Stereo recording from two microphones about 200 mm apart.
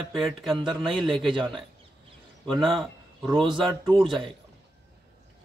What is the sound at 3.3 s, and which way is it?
Speech, 25° right (ahead or behind).